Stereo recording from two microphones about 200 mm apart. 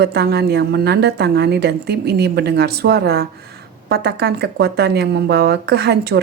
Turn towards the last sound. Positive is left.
turn(degrees=-55)  # may be behind; listen again after turning